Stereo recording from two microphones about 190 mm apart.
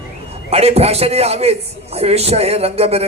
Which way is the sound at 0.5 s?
30° right (ahead or behind).